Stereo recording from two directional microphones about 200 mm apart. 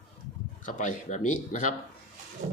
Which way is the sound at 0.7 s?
40° left (ahead or behind).